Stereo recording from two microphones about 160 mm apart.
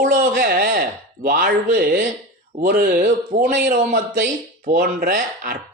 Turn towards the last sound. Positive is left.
turn(degrees=-75)  # may be behind; listen again after turning